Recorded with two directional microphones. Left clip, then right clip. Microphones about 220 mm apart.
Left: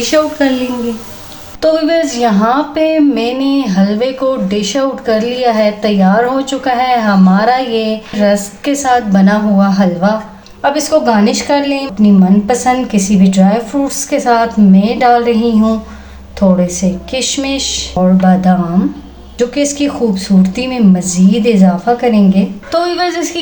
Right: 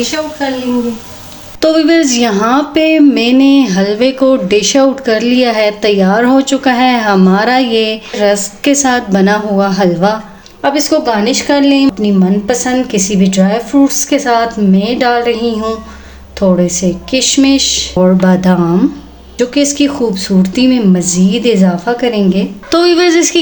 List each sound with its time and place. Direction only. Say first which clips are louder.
1.6 s speech: right 2 dB; 45° right (ahead or behind)
10.6 s speech: even; 30° right (ahead or behind)